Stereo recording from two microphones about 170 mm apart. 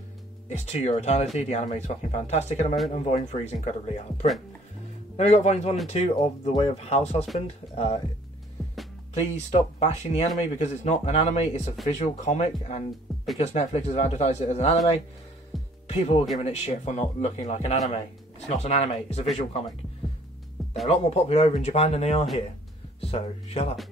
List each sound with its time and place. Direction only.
0.5 s speech: 40° left (ahead or behind)
8.6 s music: centre (ahead or behind)
9.1 s speech: 40° left (ahead or behind)
15.5 s music: centre (ahead or behind)
15.9 s speech: 35° left (ahead or behind)
20.6 s music: centre (ahead or behind)
20.9 s speech: 40° left (ahead or behind)